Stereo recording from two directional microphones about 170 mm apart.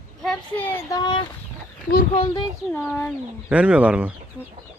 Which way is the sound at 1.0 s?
25° left (ahead or behind).